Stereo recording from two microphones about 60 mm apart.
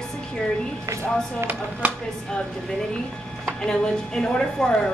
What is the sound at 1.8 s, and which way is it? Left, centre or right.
Speech, right.